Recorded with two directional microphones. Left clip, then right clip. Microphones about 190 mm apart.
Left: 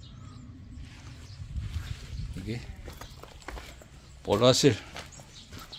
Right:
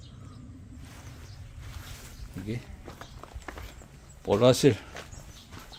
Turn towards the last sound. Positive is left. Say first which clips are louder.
# right 1 dB
turn(degrees=-15)  # may be behind; listen again after turning